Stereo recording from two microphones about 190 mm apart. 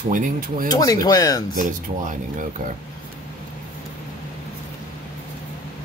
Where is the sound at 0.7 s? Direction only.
20° left (ahead or behind).